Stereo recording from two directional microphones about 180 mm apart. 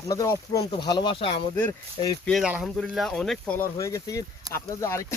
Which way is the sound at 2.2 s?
Centre (ahead or behind).